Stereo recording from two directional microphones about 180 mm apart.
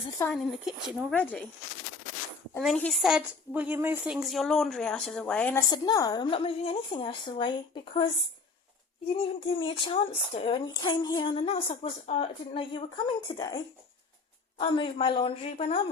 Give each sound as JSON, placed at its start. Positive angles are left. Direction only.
{"t": 0.3, "sound": "a woman's voice", "side_deg": 0}
{"t": 1.1, "sound": "speech", "side_deg": 10}
{"t": 2.6, "sound": "a woman's voice", "side_deg": 5}
{"t": 5.6, "sound": "speech", "side_deg": 20}
{"t": 9.1, "sound": "speech", "side_deg": 30}
{"t": 13.2, "sound": "speech", "side_deg": 20}
{"t": 14.6, "sound": "speech", "side_deg": 30}